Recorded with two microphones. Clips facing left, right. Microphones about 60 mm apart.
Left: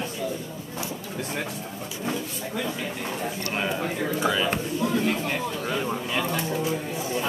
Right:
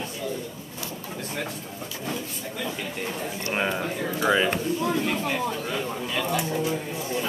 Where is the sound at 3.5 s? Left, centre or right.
Centre.